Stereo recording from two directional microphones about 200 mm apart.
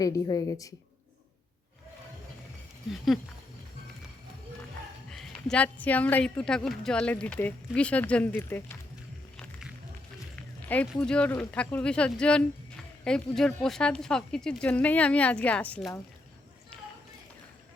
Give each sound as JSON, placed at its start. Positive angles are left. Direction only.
{"t": 0.0, "sound": "speech", "side_deg": 15}
{"t": 5.1, "sound": "speech", "side_deg": 5}
{"t": 9.4, "sound": "music", "side_deg": -5}
{"t": 10.8, "sound": "speech", "side_deg": 5}